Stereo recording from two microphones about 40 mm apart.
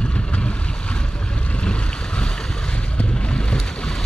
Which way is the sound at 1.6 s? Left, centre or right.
Left.